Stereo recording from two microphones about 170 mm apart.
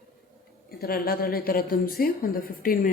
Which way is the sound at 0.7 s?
65° left (ahead or behind).